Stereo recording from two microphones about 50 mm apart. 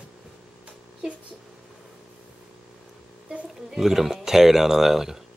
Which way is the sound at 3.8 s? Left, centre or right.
Centre.